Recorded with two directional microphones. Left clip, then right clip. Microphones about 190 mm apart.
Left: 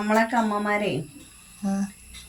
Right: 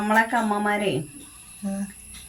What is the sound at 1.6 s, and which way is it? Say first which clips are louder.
Speech: left 3 dB; 25° left (ahead or behind).